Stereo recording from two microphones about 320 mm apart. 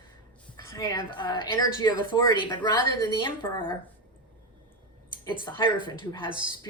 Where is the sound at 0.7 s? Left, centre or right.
Centre.